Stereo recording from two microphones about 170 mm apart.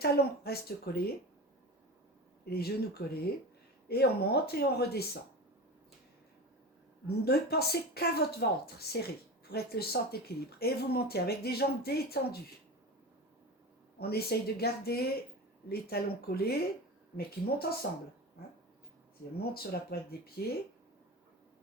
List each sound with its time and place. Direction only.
0.0 s speech: 65° left (ahead or behind)
2.4 s speech: 65° left (ahead or behind)
7.1 s speech: 65° left (ahead or behind)
14.0 s speech: 65° left (ahead or behind)
19.4 s speech: 65° left (ahead or behind)